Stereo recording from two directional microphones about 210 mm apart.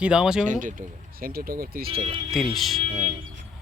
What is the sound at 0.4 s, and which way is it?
Speech, 35° right (ahead or behind).